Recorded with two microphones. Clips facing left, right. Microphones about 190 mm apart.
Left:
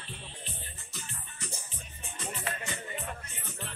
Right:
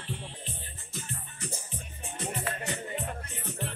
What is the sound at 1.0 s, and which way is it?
Music, 55° right (ahead or behind).